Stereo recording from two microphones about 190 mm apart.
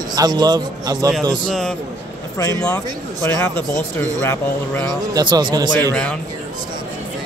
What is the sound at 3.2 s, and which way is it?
Speech, 10° left (ahead or behind).